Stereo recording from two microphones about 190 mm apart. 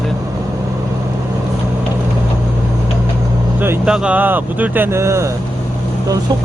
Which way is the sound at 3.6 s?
5° right (ahead or behind).